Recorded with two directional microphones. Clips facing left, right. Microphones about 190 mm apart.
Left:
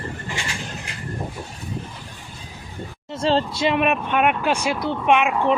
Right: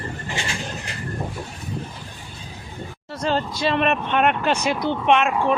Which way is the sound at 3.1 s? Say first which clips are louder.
Left 3 dB; 25° left (ahead or behind).